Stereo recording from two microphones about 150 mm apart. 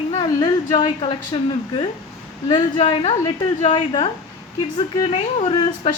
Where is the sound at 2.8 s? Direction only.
40° left (ahead or behind).